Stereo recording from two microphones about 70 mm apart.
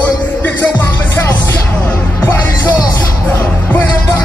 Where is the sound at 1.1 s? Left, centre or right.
Left.